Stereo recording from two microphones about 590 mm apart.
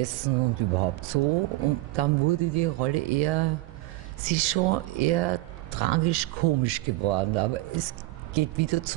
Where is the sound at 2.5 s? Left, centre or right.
Right.